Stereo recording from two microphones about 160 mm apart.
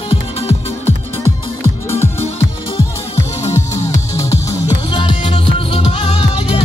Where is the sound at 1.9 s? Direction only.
15° left (ahead or behind).